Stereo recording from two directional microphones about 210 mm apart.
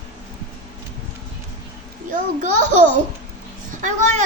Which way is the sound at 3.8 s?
35° right (ahead or behind).